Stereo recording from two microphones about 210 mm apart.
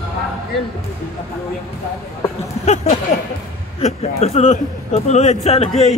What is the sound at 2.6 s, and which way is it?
Speech, 35° left (ahead or behind).